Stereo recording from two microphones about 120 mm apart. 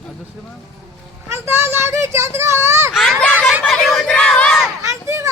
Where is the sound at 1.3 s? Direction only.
20° right (ahead or behind).